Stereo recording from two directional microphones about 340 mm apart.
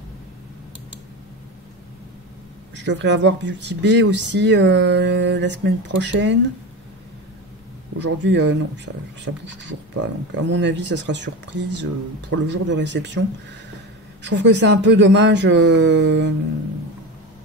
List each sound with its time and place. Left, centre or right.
2.7 s speech: right
8.0 s speech: right
14.2 s speech: right